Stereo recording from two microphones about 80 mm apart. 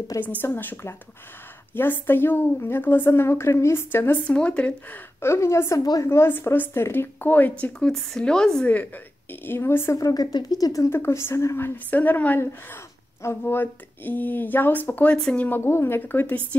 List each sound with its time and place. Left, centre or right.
0.2 s speech: left
4.3 s speech: centre
5.2 s a woman's voice: left
7.8 s speech: centre
8.7 s speech: left
9.9 s speech: left
10.9 s speech: left
15.6 s speech: left